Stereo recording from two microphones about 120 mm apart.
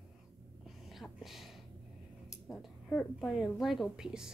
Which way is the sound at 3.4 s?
Centre (ahead or behind).